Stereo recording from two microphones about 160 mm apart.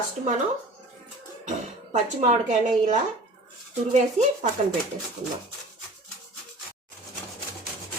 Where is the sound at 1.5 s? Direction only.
50° right (ahead or behind).